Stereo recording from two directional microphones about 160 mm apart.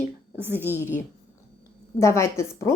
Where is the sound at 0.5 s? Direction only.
15° left (ahead or behind).